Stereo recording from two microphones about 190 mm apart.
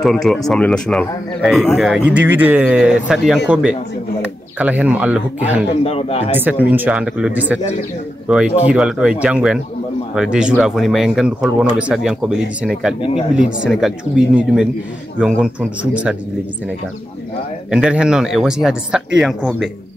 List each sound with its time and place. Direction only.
0.0 s speech: centre (ahead or behind)
5.9 s speech: 30° left (ahead or behind)
6.3 s speech: 10° right (ahead or behind)
17.6 s speech: 5° right (ahead or behind)